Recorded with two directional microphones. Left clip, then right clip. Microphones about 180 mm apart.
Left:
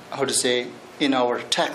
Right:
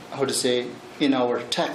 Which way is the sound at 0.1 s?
Centre (ahead or behind).